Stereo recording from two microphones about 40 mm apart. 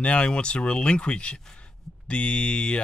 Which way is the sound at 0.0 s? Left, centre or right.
Left.